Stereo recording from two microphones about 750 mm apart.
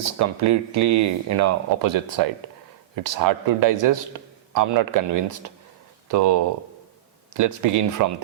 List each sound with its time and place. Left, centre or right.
0.0 s speech: right